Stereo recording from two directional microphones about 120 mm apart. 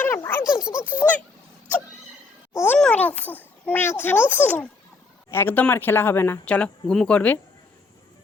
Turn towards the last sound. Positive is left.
turn(degrees=10)  # may be behind; listen again after turning